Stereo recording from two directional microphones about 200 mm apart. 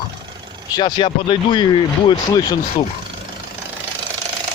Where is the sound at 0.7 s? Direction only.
25° left (ahead or behind).